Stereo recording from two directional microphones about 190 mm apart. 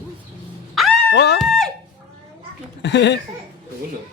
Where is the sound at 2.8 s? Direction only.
65° left (ahead or behind).